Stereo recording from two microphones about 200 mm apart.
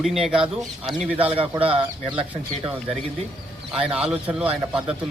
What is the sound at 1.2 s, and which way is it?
Speech, 30° right (ahead or behind).